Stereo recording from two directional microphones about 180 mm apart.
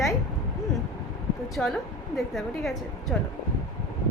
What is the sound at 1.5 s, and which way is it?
Speech, centre (ahead or behind).